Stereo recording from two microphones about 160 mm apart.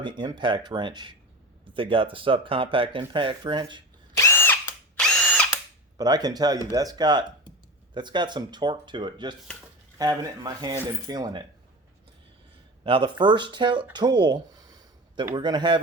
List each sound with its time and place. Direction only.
0.0 s speech: 30° right (ahead or behind)
4.1 s drill: 15° left (ahead or behind)
6.0 s speech: 25° right (ahead or behind)
12.8 s speech: 30° right (ahead or behind)
13.9 s a sound: 25° right (ahead or behind)
15.4 s speech: 30° right (ahead or behind)